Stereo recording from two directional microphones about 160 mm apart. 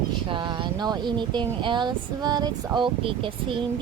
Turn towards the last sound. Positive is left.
turn(degrees=-30)  # may be behind; listen again after turning